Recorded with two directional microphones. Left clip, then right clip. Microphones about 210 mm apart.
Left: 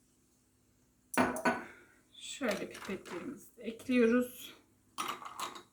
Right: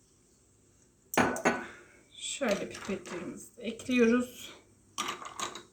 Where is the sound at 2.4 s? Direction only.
15° right (ahead or behind).